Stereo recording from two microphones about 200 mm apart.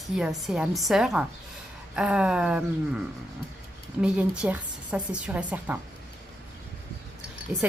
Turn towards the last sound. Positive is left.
turn(degrees=-5)  # may be behind; listen again after turning